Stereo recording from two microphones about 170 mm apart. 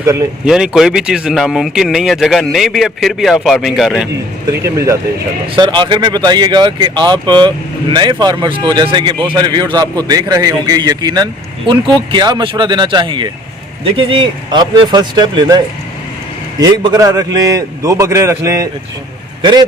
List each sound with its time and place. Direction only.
0.0 s speech: 20° right (ahead or behind)
0.4 s speech: 5° right (ahead or behind)
4.6 s a man's voice: 20° right (ahead or behind)